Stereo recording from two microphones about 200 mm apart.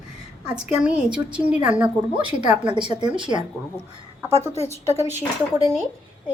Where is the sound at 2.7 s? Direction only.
25° right (ahead or behind).